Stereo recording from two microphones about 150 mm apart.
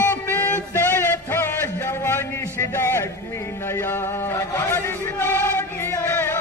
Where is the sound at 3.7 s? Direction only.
15° left (ahead or behind).